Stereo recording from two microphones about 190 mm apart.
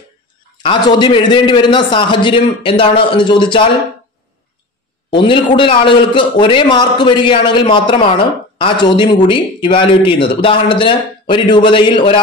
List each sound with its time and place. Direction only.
0.6 s a man's voice: 25° left (ahead or behind)
5.1 s a man's voice: 25° left (ahead or behind)